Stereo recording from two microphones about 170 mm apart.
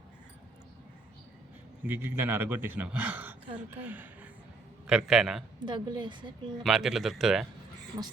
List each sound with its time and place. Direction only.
1.8 s a man's voice: 10° right (ahead or behind)
5.5 s a woman's voice: 25° right (ahead or behind)
6.6 s speech: centre (ahead or behind)